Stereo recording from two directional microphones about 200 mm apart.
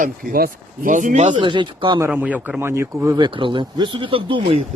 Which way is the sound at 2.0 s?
5° right (ahead or behind).